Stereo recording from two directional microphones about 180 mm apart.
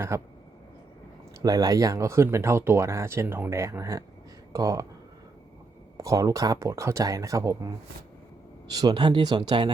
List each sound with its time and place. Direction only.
0.1 s speech: 15° right (ahead or behind)
1.4 s speech: 20° right (ahead or behind)
6.0 s speech: 15° right (ahead or behind)
8.7 s speech: 20° right (ahead or behind)